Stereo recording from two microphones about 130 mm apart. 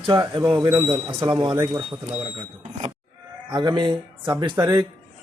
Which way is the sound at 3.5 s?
35° right (ahead or behind).